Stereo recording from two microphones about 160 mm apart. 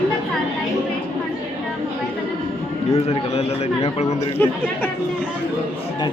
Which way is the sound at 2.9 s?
40° left (ahead or behind).